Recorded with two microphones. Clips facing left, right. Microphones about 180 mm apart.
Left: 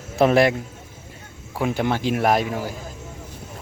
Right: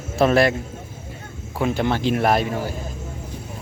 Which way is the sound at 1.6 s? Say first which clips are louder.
Right 1 dB; 10° left (ahead or behind).